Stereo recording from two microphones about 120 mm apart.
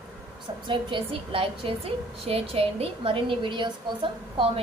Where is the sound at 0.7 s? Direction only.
45° right (ahead or behind).